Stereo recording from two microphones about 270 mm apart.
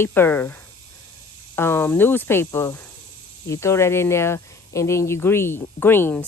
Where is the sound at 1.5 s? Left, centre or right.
Centre.